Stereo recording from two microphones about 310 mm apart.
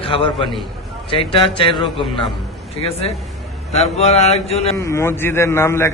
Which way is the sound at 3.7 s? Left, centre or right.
Centre.